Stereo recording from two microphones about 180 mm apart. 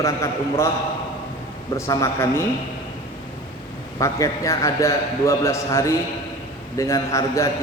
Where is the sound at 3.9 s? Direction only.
20° left (ahead or behind).